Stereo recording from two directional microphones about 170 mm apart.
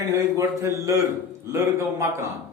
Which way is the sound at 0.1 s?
15° right (ahead or behind).